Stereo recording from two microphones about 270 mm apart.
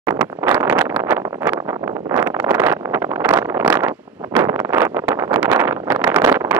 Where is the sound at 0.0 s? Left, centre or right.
Centre.